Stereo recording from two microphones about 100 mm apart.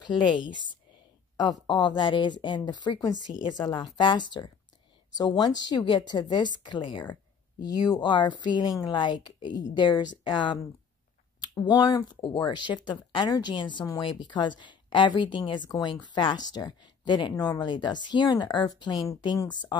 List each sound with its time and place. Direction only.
0.0 s speech: 55° left (ahead or behind)
1.3 s speech: 45° left (ahead or behind)